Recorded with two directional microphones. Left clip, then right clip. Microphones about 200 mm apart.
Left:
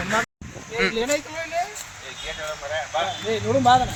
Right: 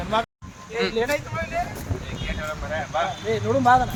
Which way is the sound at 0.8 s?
5° right (ahead or behind).